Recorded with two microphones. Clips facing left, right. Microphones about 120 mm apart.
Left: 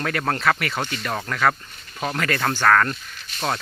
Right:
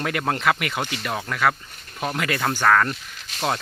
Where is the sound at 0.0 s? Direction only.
15° right (ahead or behind).